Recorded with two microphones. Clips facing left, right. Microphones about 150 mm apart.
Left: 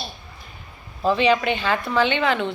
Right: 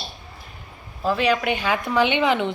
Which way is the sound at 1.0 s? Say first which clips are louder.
Left 2 dB; 5° right (ahead or behind).